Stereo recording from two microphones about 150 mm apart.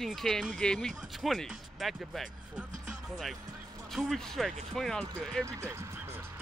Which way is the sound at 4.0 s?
Centre (ahead or behind).